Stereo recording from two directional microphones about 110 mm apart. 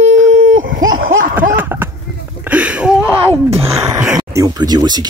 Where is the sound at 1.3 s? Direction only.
15° right (ahead or behind).